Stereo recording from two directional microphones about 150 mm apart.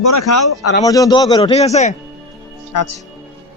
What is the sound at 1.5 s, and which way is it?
Speech, 45° left (ahead or behind).